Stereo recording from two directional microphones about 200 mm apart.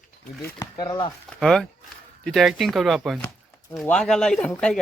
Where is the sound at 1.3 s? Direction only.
Centre (ahead or behind).